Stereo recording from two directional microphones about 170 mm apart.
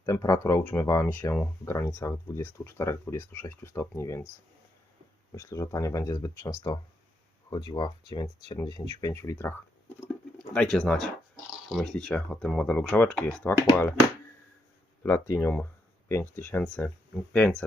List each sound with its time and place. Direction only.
0.0 s speech: 20° left (ahead or behind)
5.3 s speech: 20° left (ahead or behind)
7.5 s speech: 25° left (ahead or behind); by 13.6 s 10° left (ahead or behind)
15.0 s speech: 15° left (ahead or behind)